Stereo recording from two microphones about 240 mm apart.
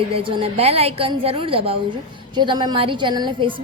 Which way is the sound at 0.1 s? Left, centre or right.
Right.